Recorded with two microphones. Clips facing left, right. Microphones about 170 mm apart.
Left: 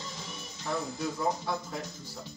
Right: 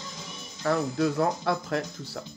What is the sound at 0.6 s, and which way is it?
Speech, 75° right (ahead or behind).